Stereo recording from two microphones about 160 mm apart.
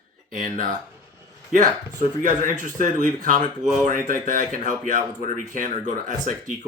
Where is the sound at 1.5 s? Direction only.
55° right (ahead or behind).